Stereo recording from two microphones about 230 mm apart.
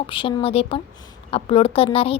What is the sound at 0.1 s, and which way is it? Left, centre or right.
A woman's voice, left.